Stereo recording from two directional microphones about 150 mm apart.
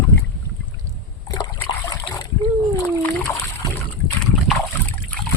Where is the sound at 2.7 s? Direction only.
10° left (ahead or behind).